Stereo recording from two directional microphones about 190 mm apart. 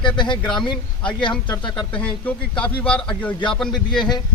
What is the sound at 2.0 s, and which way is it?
A man's voice, 5° left (ahead or behind).